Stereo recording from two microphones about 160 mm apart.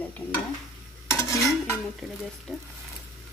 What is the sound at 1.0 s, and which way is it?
Stir, 20° left (ahead or behind).